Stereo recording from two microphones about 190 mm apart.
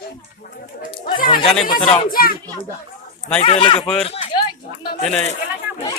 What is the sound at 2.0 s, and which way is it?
Speech, 50° left (ahead or behind).